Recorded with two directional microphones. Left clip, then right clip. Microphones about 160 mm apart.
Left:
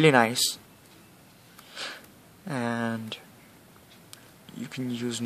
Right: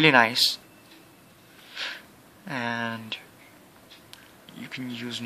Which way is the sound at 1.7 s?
50° left (ahead or behind).